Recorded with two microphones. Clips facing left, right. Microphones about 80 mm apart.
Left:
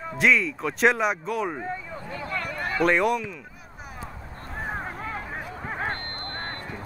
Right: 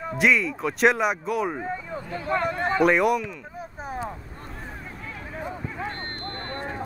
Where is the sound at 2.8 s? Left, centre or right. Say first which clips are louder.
Right 1 dB; centre.